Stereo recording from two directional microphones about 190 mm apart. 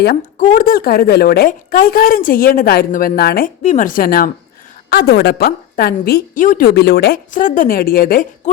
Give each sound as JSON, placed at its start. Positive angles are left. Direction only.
{"t": 0.0, "sound": "a woman's voice", "side_deg": 50}
{"t": 3.6, "sound": "a woman's voice", "side_deg": 40}